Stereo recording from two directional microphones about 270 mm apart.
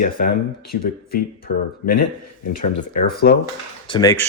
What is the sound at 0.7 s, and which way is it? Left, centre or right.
Speech, left.